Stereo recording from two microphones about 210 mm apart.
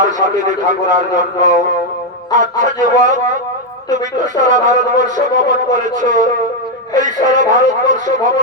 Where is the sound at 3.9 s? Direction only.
35° right (ahead or behind).